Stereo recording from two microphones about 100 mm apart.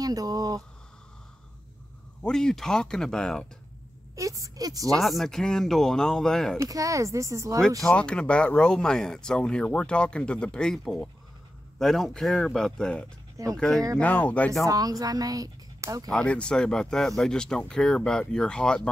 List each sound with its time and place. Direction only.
0.0 s speech: 35° right (ahead or behind)
2.2 s speech: 5° left (ahead or behind)
4.1 s speech: 35° right (ahead or behind)
4.9 s speech: centre (ahead or behind)
6.6 s speech: 35° right (ahead or behind)
7.8 s speech: 10° left (ahead or behind)
13.9 s speech: 15° left (ahead or behind)
14.7 s speech: 40° right (ahead or behind)
16.1 s speech: 10° left (ahead or behind)